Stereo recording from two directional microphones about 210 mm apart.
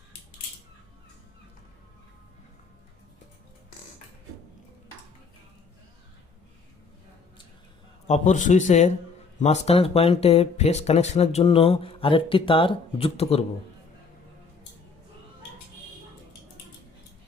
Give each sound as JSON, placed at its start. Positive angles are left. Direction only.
{"t": 8.0, "sound": "a man's voice", "side_deg": 35}